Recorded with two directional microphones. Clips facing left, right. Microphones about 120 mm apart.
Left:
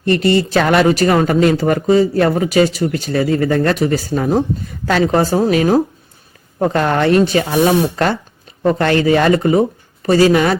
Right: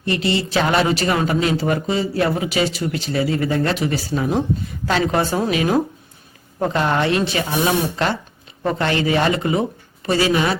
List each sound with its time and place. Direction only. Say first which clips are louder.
0.0 s a woman's voice: left 7 dB; 50° left (ahead or behind)